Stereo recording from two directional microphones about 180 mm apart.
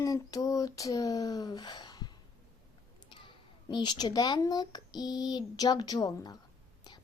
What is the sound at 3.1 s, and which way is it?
A child's voice, 25° left (ahead or behind).